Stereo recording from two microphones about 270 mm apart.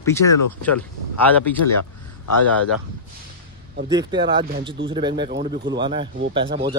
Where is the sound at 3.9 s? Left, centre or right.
Centre.